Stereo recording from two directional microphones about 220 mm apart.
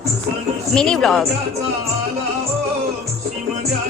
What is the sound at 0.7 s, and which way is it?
Speech, 5° left (ahead or behind).